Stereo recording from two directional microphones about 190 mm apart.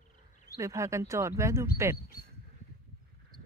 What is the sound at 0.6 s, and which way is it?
Speech, 15° right (ahead or behind).